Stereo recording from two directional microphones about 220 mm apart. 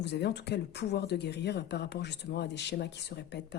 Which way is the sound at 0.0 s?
50° left (ahead or behind).